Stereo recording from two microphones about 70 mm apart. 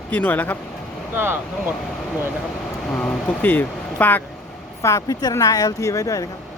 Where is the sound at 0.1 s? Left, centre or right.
Left.